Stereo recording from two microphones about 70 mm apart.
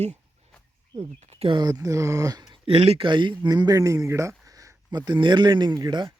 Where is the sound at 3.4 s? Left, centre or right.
Right.